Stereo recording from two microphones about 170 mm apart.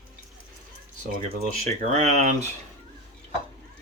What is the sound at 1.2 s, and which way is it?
Speech, 45° right (ahead or behind).